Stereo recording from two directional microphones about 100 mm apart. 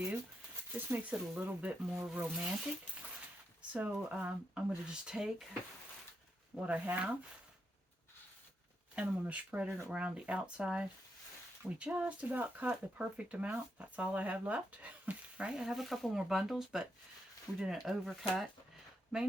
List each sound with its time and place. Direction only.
0.7 s speech: 20° right (ahead or behind)
3.7 s speech: 15° right (ahead or behind)
6.6 s speech: 15° right (ahead or behind)
9.0 s speech: 15° right (ahead or behind)